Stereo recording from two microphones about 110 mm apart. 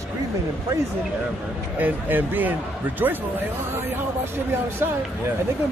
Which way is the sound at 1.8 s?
20° right (ahead or behind).